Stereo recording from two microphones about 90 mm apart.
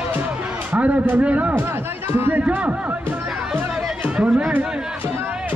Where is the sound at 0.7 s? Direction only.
15° right (ahead or behind).